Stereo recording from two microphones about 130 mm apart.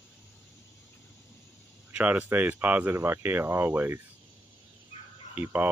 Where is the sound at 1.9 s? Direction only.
10° right (ahead or behind).